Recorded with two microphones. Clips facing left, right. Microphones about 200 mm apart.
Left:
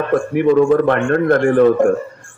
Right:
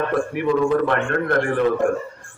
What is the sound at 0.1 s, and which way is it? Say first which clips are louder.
A man's voice: left 7 dB; 50° left (ahead or behind).